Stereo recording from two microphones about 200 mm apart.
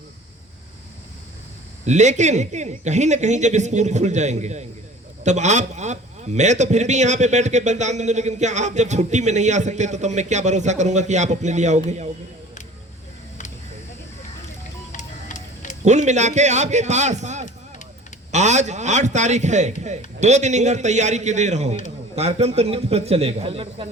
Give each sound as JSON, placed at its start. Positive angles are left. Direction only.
{"t": 1.8, "sound": "a man's voice", "side_deg": -35}
{"t": 14.9, "sound": "music", "side_deg": 40}
{"t": 15.8, "sound": "a man's voice", "side_deg": -35}